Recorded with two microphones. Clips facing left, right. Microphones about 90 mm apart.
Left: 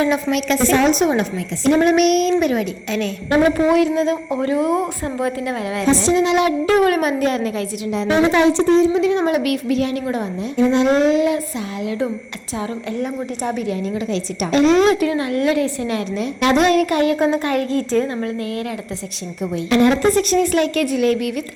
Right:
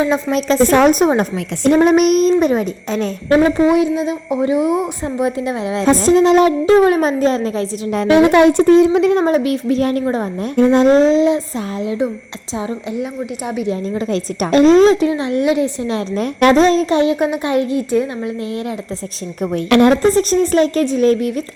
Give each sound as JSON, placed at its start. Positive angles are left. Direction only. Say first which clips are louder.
{"t": 0.0, "sound": "a child's voice", "louder": "right 2 dB", "side_deg": -30}
{"t": 0.7, "sound": "a woman's voice", "louder": "right 3 dB", "side_deg": -50}
{"t": 3.6, "sound": "a woman's voice", "louder": "right 2 dB", "side_deg": -20}
{"t": 5.8, "sound": "a woman's voice", "louder": "right 5 dB", "side_deg": -45}
{"t": 6.7, "sound": "a woman's voice", "louder": "right 4 dB", "side_deg": -25}
{"t": 8.2, "sound": "speech", "louder": "right 4 dB", "side_deg": -55}
{"t": 9.2, "sound": "a child's voice", "louder": "right 3 dB", "side_deg": -30}
{"t": 13.4, "sound": "a woman's voice", "louder": "even", "side_deg": -5}
{"t": 13.7, "sound": "a child's voice", "louder": "right 2 dB", "side_deg": -30}
{"t": 14.1, "sound": "a woman's voice", "louder": "right 5 dB", "side_deg": -40}
{"t": 16.1, "sound": "a woman's voice", "louder": "right 6 dB", "side_deg": -50}
{"t": 16.6, "sound": "a woman's voice", "louder": "right 3 dB", "side_deg": -25}
{"t": 19.7, "sound": "a woman's voice", "louder": "right 4 dB", "side_deg": -70}
{"t": 20.1, "sound": "a child's voice", "louder": "right 3 dB", "side_deg": -35}